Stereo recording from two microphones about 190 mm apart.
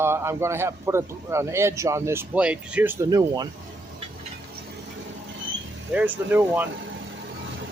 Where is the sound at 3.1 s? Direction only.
20° right (ahead or behind).